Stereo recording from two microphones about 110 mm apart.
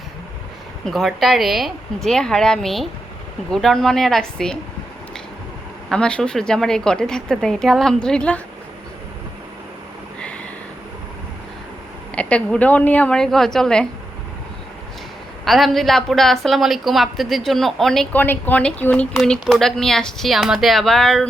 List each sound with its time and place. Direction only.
0.9 s a woman's voice: centre (ahead or behind)
5.9 s a woman's voice: 10° left (ahead or behind)
12.1 s a woman's voice: 10° left (ahead or behind)
15.4 s a woman's voice: centre (ahead or behind)
18.1 s a woman's voice: 20° left (ahead or behind)